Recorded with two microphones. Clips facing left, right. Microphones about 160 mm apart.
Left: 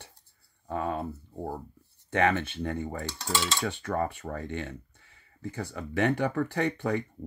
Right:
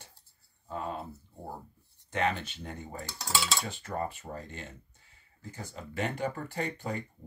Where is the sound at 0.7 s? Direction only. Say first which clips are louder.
Left 5 dB; 65° left (ahead or behind).